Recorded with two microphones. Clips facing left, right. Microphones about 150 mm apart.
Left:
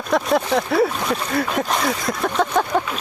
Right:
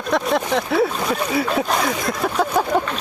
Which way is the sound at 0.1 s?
Centre (ahead or behind).